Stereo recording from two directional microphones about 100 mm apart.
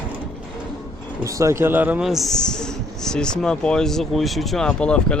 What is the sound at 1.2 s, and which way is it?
Speech, 30° right (ahead or behind).